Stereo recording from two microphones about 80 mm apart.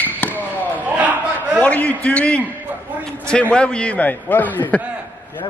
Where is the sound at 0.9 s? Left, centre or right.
Centre.